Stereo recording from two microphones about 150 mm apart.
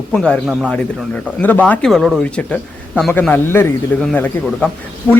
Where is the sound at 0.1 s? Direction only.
5° left (ahead or behind).